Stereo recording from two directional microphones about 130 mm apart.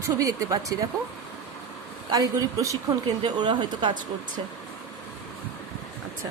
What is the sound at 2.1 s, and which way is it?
A woman's voice, 25° right (ahead or behind).